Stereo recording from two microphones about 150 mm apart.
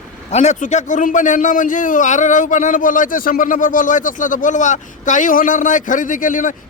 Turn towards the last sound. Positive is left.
turn(degrees=60)  # may be behind; listen again after turning